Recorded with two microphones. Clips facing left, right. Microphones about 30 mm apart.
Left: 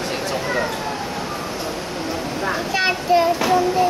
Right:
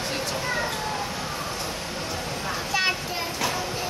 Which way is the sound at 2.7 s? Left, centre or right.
Centre.